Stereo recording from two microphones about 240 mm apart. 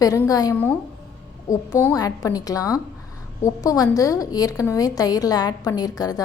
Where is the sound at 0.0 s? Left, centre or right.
Centre.